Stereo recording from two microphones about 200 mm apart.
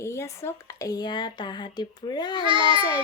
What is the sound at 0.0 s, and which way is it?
Speech, 15° left (ahead or behind).